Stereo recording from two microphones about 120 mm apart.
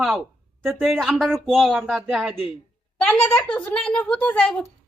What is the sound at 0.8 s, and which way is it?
Speech, centre (ahead or behind).